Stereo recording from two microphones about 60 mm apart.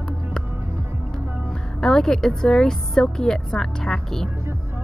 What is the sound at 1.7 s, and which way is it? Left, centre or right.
A woman's voice, centre.